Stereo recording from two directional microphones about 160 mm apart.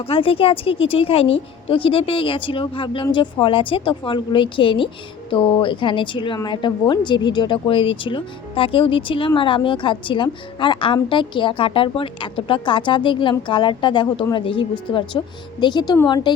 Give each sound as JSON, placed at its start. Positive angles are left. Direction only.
{"t": 0.0, "sound": "a woman's voice", "side_deg": 35}